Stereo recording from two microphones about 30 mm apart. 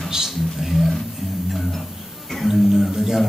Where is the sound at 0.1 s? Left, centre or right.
Centre.